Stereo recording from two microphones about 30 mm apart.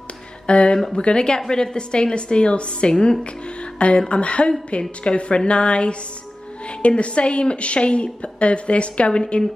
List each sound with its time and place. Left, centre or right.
0.5 s a woman's voice: left